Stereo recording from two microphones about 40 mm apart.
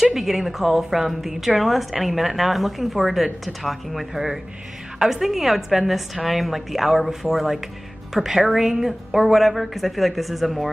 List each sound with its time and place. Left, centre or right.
0.0 s a woman's voice: centre